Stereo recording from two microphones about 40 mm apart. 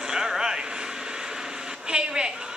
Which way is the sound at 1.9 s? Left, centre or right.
Centre.